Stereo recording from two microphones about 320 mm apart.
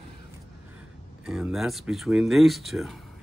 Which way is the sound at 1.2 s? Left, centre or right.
Centre.